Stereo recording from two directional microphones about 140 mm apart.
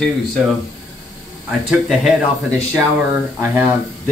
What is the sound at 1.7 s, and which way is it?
Speech, centre (ahead or behind).